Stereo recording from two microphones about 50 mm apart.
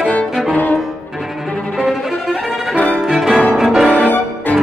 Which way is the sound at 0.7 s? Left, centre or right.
Centre.